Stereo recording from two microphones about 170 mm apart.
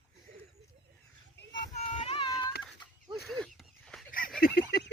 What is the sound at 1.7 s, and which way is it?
Child singing, 40° left (ahead or behind).